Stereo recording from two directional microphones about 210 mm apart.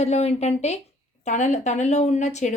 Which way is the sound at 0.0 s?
30° left (ahead or behind).